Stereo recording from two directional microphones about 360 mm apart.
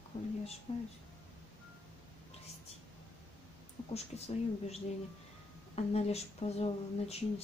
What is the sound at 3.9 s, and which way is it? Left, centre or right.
Speech, centre.